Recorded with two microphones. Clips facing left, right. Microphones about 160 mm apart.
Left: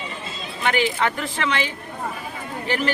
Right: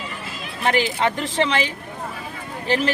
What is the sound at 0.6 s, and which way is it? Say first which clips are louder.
Speech: right 1 dB; 35° right (ahead or behind).